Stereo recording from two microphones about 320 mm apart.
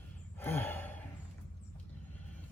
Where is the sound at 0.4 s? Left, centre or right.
Centre.